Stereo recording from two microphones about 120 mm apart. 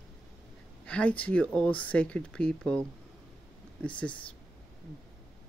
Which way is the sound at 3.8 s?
10° left (ahead or behind).